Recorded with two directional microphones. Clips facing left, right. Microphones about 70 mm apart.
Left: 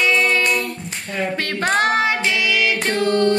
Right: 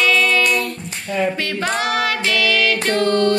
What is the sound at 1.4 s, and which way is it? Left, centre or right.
Female singing, left.